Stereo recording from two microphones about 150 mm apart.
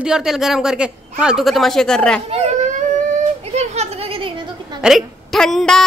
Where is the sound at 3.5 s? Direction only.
45° right (ahead or behind).